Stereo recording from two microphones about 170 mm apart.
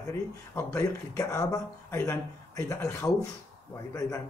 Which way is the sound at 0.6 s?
20° left (ahead or behind).